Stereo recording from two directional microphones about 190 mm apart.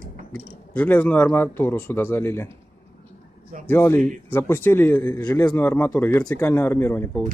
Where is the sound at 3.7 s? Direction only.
10° left (ahead or behind).